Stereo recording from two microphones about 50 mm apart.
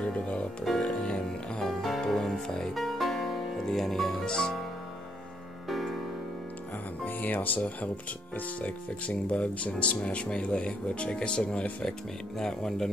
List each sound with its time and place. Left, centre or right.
0.0 s music: left
0.7 s music: centre
5.7 s music: centre
7.1 s speech: left
12.4 s speech: centre